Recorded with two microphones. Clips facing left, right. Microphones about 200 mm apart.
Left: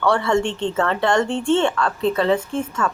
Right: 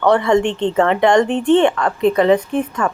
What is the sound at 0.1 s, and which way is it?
Speech, 20° right (ahead or behind).